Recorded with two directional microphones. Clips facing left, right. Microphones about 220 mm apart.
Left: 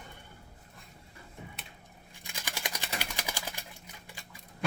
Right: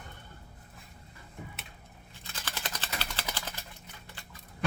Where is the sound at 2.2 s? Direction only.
15° left (ahead or behind).